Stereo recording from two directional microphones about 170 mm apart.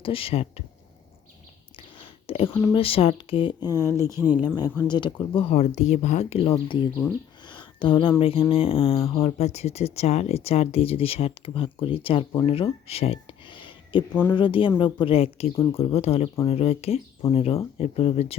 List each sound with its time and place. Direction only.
0.0 s speech: 35° left (ahead or behind)
2.0 s whispering: 35° left (ahead or behind)
2.5 s speech: 15° left (ahead or behind)
2.7 s speech: 35° left (ahead or behind)
3.8 s speech: 15° right (ahead or behind)
4.9 s speech: 25° left (ahead or behind)
7.5 s a sound: 30° left (ahead or behind)
8.2 s speech: 35° left (ahead or behind)
12.5 s a sound: 35° left (ahead or behind)
14.1 s speech: 10° left (ahead or behind)
14.3 s speech: 30° left (ahead or behind)